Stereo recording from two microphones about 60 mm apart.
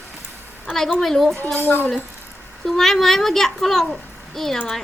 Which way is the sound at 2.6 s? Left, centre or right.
Centre.